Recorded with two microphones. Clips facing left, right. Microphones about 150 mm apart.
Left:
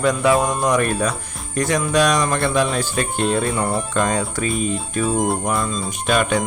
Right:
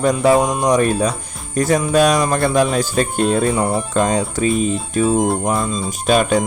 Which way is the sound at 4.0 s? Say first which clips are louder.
Right 4 dB; 30° right (ahead or behind).